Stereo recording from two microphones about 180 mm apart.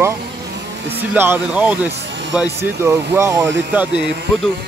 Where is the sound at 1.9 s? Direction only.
80° right.